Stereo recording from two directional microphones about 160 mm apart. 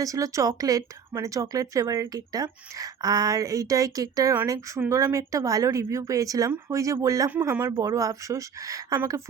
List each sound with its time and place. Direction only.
0.0 s speech: 20° right (ahead or behind)